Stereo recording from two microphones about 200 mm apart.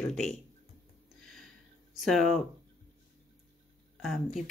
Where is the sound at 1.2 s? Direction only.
Centre (ahead or behind).